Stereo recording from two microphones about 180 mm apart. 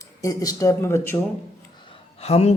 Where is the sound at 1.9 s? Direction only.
35° left (ahead or behind).